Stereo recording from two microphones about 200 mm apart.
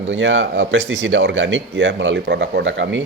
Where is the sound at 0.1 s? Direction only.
70° right (ahead or behind).